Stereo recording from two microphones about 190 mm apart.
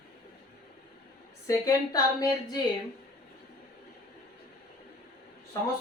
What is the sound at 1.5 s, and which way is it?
Speech, 20° left (ahead or behind).